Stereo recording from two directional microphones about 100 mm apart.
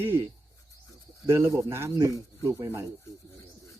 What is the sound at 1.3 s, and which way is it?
Speech, 30° right (ahead or behind).